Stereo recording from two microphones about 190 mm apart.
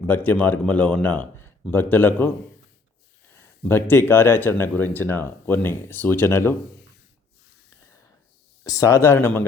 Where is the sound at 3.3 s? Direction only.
10° left (ahead or behind).